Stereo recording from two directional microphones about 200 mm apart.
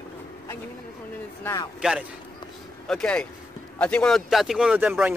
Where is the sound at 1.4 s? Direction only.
15° left (ahead or behind).